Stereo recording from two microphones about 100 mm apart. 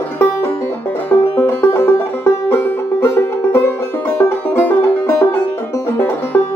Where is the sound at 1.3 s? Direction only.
20° left (ahead or behind).